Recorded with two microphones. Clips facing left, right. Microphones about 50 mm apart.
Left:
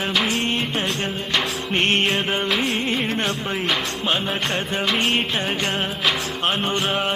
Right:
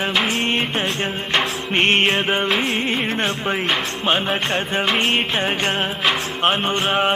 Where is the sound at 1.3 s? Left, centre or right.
Right.